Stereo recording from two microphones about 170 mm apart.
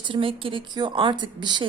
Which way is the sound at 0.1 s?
30° right (ahead or behind).